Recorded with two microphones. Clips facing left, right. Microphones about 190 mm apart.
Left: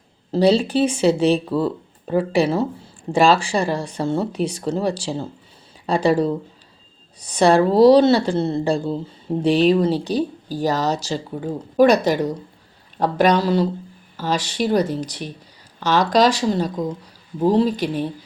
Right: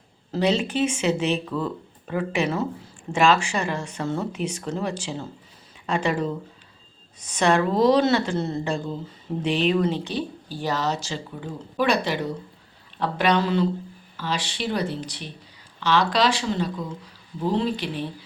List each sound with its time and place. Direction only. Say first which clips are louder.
0.3 s speech: left 6 dB; 35° left (ahead or behind)